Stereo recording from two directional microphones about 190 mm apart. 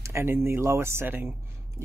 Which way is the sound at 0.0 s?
15° right (ahead or behind).